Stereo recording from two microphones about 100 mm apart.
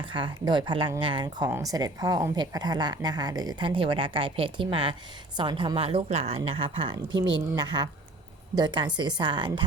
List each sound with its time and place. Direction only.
0.0 s a woman's voice: 55° right (ahead or behind)
1.6 s a woman's voice: 40° right (ahead or behind); by 7.0 s 60° right (ahead or behind)
7.2 s a woman's voice: 45° right (ahead or behind)